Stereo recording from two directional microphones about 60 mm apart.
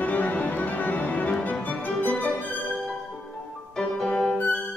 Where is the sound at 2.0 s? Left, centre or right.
Centre.